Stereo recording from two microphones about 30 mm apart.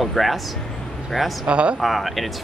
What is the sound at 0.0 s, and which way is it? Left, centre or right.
Speech, centre.